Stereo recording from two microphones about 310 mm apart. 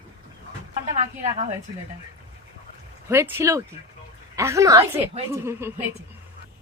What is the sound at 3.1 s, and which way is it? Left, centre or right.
Speech, centre.